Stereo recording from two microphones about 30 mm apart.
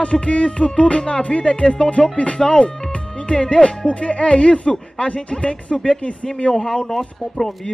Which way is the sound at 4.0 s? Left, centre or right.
Left.